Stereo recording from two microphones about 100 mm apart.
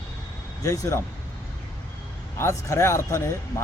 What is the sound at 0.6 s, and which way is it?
Speech, 30° left (ahead or behind).